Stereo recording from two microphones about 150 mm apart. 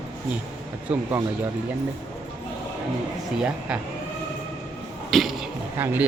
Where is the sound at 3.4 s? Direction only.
5° right (ahead or behind).